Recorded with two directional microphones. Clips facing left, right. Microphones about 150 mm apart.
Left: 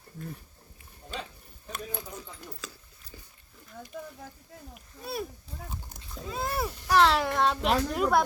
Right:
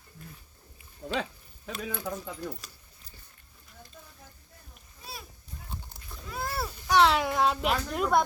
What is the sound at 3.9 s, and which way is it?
Speech, 90° left.